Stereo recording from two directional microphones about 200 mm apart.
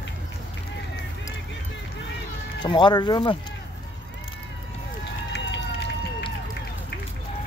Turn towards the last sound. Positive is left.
turn(degrees=65)  # may be behind; listen again after turning